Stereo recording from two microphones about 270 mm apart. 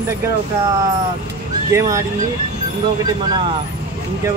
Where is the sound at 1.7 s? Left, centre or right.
Centre.